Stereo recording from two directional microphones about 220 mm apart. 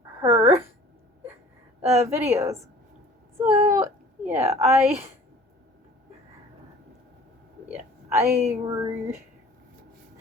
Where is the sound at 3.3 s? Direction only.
10° right (ahead or behind).